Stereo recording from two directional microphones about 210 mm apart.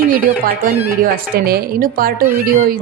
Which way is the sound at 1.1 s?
45° right (ahead or behind).